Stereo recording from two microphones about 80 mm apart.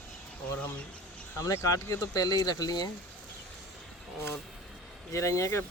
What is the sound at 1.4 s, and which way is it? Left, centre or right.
Speech, left.